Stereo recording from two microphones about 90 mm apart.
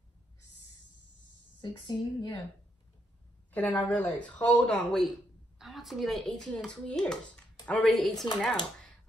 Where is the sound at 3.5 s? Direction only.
15° left (ahead or behind).